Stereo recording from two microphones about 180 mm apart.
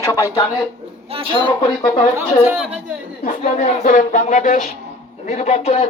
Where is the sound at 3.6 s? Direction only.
45° left (ahead or behind).